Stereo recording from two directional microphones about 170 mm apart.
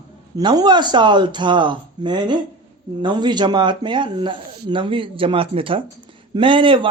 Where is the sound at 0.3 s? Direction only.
25° right (ahead or behind).